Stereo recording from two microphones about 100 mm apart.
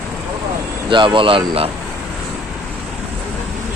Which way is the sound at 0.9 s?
55° right (ahead or behind).